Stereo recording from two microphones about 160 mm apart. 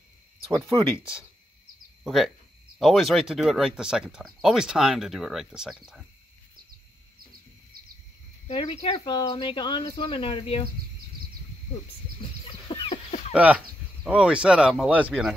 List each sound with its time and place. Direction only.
2.0 s speech: centre (ahead or behind)
7.7 s a sound: 70° right (ahead or behind)
8.5 s speech: 35° left (ahead or behind)
12.2 s chicken: 30° left (ahead or behind)
13.3 s speech: 10° right (ahead or behind)